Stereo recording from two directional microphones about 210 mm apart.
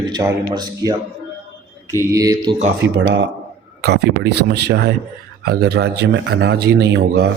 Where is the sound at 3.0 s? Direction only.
55° right (ahead or behind).